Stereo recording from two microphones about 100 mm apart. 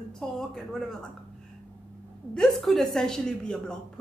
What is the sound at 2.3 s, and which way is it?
A woman's voice, centre (ahead or behind).